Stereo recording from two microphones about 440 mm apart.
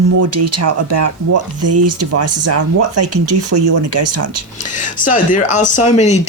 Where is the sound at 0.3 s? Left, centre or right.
Right.